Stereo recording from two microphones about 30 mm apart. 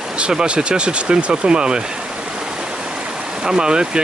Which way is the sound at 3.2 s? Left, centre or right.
Right.